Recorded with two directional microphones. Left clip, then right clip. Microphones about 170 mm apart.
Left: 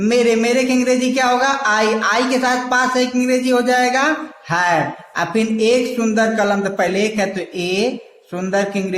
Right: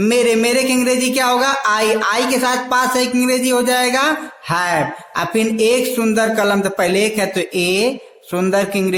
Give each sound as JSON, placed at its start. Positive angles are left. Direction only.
{"t": 0.0, "sound": "speech", "side_deg": -35}